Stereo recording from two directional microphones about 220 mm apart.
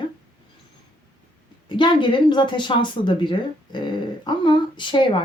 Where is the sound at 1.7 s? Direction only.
20° left (ahead or behind).